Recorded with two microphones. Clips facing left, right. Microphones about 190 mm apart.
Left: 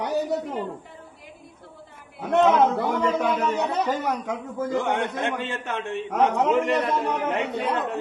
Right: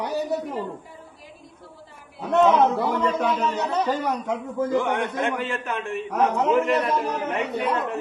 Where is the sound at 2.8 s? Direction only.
25° left (ahead or behind).